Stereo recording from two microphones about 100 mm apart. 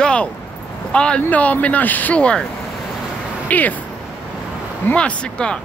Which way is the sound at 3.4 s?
15° left (ahead or behind).